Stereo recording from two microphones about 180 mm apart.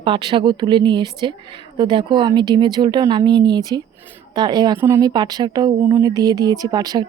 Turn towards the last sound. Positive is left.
turn(degrees=-20)  # may be behind; listen again after turning